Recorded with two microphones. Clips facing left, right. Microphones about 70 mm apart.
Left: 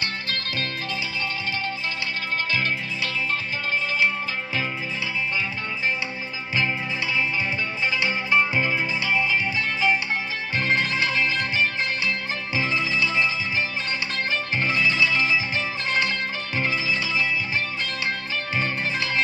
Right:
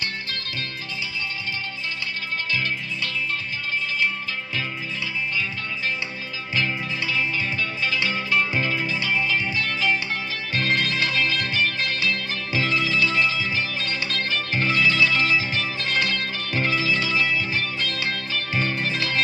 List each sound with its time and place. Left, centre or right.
0.4 s music: left
2.5 s music: left
8.0 s music: left